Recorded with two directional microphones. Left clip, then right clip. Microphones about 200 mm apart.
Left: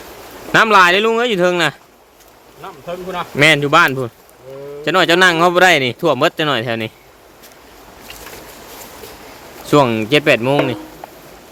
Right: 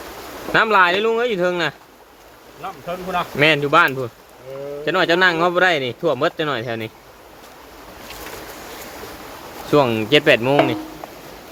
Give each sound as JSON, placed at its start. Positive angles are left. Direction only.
{"t": 0.5, "sound": "speech", "side_deg": 40}
{"t": 3.3, "sound": "speech", "side_deg": 35}
{"t": 9.6, "sound": "speech", "side_deg": 35}